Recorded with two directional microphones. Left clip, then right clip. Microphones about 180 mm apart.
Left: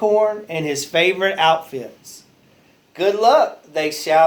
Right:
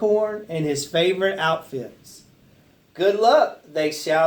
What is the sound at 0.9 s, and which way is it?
Speech, 25° left (ahead or behind).